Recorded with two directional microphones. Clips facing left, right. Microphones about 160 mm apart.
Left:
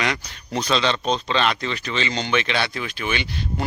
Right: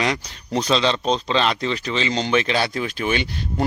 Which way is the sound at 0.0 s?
30° right (ahead or behind).